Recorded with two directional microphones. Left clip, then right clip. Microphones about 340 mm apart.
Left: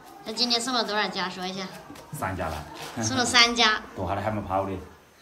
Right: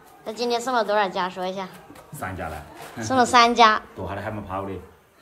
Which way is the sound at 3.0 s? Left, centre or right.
Centre.